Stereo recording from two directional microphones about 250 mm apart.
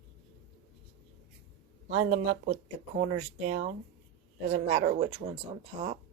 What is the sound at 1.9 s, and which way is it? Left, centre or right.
Speech, right.